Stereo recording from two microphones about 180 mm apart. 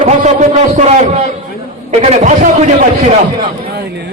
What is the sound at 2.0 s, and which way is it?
Speech, 40° right (ahead or behind).